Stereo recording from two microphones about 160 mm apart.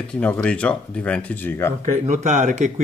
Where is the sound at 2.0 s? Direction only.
50° right (ahead or behind).